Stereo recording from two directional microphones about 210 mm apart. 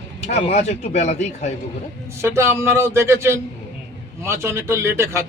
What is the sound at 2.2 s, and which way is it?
Speech, 15° right (ahead or behind).